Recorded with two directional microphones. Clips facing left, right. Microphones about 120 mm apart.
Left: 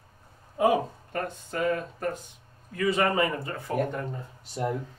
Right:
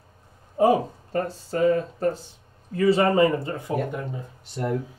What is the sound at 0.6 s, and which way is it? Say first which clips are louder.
Speech: right 4 dB; 30° right (ahead or behind).